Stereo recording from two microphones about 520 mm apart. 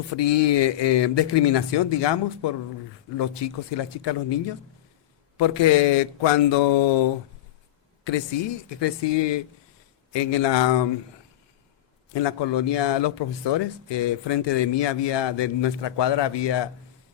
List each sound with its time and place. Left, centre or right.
0.2 s a man's voice: left
5.4 s speech: left
8.8 s a man's voice: left
12.1 s a man's voice: left